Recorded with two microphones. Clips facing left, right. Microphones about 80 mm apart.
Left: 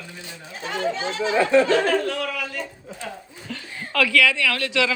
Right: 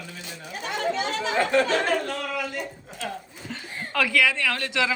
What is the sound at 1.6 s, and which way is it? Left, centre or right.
Speech, left.